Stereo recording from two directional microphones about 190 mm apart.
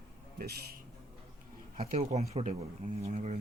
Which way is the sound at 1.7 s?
35° right (ahead or behind).